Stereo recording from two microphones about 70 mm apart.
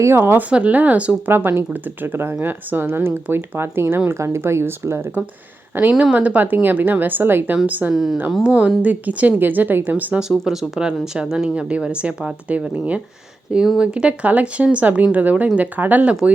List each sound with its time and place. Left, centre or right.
0.0 s speech: right
0.5 s speech: right
1.3 s speech: right
5.9 s speech: centre
6.1 s speech: right
7.9 s speech: centre
8.4 s speech: centre
10.2 s speech: centre